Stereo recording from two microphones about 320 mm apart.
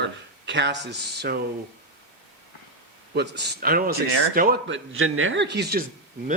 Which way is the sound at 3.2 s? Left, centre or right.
Right.